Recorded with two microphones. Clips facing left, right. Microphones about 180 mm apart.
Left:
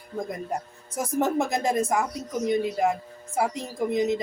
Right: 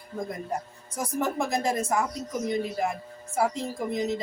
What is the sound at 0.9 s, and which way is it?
A woman's voice, 20° left (ahead or behind).